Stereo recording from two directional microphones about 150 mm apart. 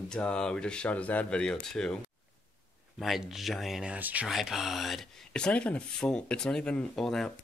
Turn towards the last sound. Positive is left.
turn(degrees=0)  # may be behind; listen again after turning